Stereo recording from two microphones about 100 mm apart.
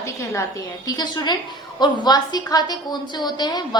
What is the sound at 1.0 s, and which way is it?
A woman's voice, 45° left (ahead or behind).